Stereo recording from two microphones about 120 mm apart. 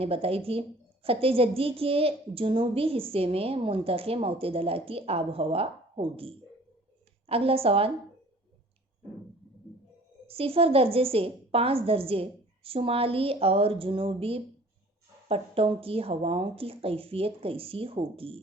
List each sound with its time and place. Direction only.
0.0 s a woman's voice: 55° right (ahead or behind)
10.2 s a woman's voice: 50° right (ahead or behind)